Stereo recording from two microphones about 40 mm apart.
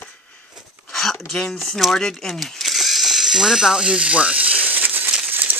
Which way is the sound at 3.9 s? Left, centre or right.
Right.